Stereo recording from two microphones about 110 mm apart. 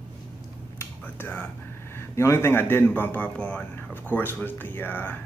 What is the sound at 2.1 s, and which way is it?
A man's voice, 25° left (ahead or behind).